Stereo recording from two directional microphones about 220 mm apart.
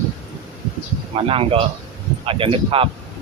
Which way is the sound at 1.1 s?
25° right (ahead or behind).